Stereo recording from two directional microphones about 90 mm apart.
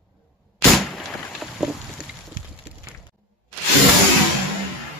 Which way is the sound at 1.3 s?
5° right (ahead or behind).